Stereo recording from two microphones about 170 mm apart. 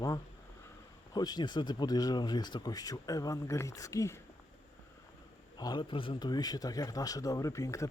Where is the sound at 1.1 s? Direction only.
25° left (ahead or behind).